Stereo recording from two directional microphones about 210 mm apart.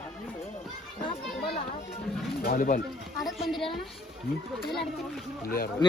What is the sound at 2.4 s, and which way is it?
Speech, 40° left (ahead or behind).